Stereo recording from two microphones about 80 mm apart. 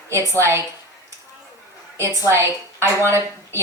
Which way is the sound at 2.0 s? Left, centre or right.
Right.